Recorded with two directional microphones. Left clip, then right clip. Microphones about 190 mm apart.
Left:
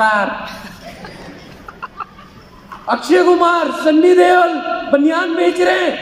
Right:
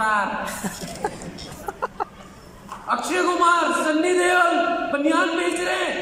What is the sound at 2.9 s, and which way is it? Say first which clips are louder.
A man's voice: left 10 dB; 40° left (ahead or behind).